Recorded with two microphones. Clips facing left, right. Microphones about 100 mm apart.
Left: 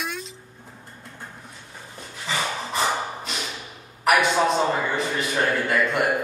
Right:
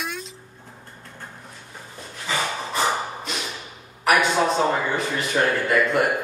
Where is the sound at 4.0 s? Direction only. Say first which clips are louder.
Even; centre (ahead or behind).